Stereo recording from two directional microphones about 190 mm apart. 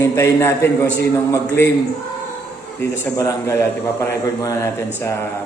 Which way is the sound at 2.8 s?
15° left (ahead or behind).